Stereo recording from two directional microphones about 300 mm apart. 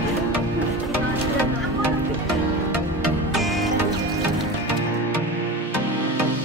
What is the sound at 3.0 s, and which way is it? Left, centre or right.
Music, centre.